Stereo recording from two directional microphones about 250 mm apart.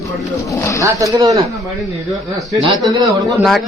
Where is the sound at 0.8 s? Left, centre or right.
Centre.